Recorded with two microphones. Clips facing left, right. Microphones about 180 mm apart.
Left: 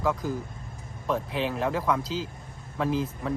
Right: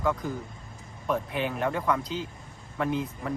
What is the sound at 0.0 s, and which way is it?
Speech, centre (ahead or behind).